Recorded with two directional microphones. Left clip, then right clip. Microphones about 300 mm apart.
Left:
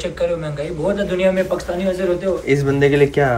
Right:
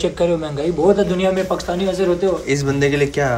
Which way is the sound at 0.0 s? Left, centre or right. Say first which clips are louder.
Right 2 dB; right.